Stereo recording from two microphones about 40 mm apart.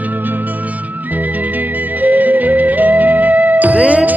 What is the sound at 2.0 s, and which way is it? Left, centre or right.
Music, right.